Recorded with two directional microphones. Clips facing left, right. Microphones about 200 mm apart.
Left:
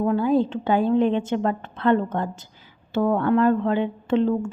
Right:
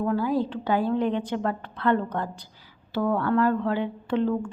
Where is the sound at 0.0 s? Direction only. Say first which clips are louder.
Left 4 dB; 25° left (ahead or behind).